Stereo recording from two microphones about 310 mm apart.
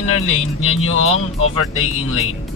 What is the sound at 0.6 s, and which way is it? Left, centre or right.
Speech, left.